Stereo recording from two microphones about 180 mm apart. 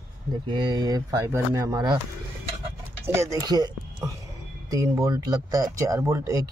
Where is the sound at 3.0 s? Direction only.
15° right (ahead or behind).